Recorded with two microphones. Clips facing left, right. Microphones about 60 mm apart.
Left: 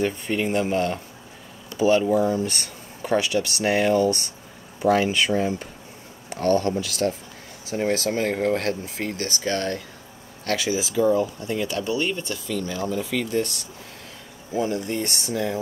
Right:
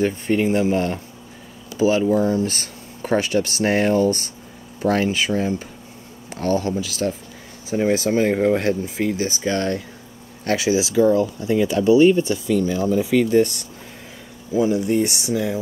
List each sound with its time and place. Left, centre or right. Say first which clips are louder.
0.0 s speech: right 5 dB; centre
6.4 s speech: even; centre
10.8 s speech: right 3 dB; centre
14.6 s speech: right 7 dB; centre